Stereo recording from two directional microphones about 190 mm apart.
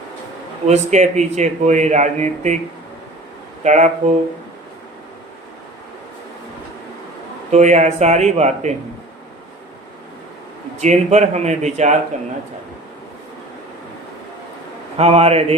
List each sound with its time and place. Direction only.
0.7 s a man's voice: 40° right (ahead or behind)
3.6 s speech: 35° right (ahead or behind)
7.5 s a man's voice: 35° right (ahead or behind)
10.8 s a man's voice: 35° right (ahead or behind)
14.9 s a man's voice: 30° right (ahead or behind)